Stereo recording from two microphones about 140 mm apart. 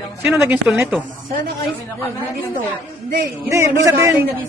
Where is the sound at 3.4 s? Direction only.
20° right (ahead or behind).